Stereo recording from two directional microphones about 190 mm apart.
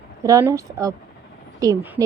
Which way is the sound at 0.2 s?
15° right (ahead or behind).